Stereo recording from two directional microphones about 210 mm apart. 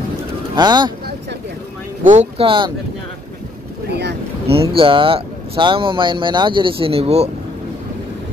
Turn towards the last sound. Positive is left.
turn(degrees=-30)  # may be behind; listen again after turning